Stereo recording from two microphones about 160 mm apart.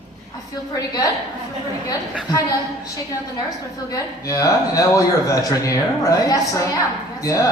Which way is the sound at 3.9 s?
20° left (ahead or behind).